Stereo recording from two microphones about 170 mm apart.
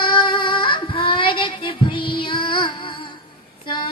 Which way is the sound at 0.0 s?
30° left (ahead or behind).